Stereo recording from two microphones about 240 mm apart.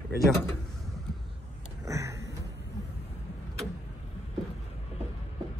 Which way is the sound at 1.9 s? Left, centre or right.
Centre.